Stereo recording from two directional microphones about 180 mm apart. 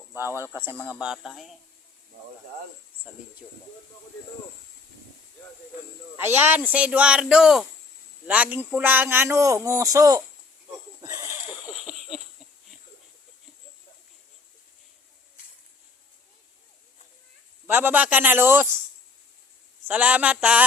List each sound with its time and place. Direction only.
0.1 s speech: 15° right (ahead or behind)
3.1 s speech: 10° right (ahead or behind)
6.1 s speech: 10° right (ahead or behind)
11.0 s a sound: 20° right (ahead or behind)
11.7 s a sound: centre (ahead or behind)
17.7 s speech: 10° right (ahead or behind)
19.9 s speech: 10° right (ahead or behind)